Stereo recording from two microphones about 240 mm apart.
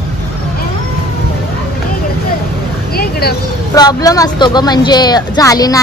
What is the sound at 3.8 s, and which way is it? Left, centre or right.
Speech, centre.